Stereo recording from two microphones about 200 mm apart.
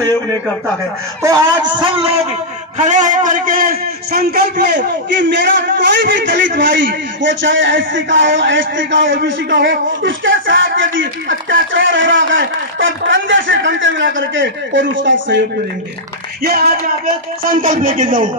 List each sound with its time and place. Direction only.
1.2 s a man's voice: 20° right (ahead or behind); by 15.3 s 70° right (ahead or behind)
16.4 s a man's voice: 50° right (ahead or behind)